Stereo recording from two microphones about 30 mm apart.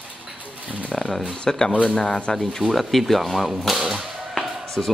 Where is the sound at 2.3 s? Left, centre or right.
Centre.